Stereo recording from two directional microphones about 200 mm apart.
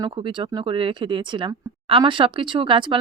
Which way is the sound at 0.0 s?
25° right (ahead or behind).